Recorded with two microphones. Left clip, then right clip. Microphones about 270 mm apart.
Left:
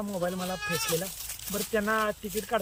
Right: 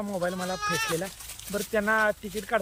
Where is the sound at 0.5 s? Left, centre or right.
Left.